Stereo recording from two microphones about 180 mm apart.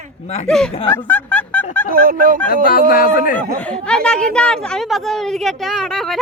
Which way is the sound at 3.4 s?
5° left (ahead or behind).